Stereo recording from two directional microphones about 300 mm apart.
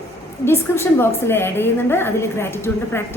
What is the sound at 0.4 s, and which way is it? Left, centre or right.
A woman's voice, centre.